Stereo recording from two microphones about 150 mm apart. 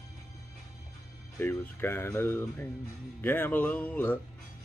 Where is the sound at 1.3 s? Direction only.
20° left (ahead or behind).